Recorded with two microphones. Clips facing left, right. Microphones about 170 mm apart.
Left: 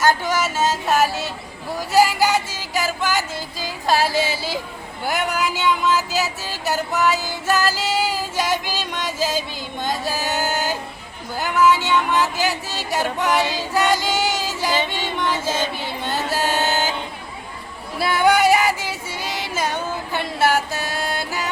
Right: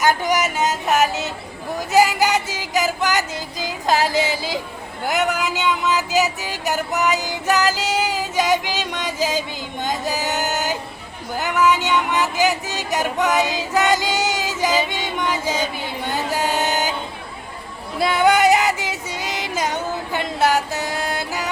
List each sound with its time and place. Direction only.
0.0 s music: 15° right (ahead or behind)
5.0 s a sound: 20° right (ahead or behind)
13.7 s female singing: 20° right (ahead or behind)
14.8 s music: 15° right (ahead or behind)
17.9 s female singing: 20° right (ahead or behind)